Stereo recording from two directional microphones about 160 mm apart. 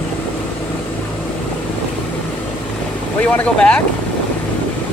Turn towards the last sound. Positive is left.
turn(degrees=5)  # may be behind; listen again after turning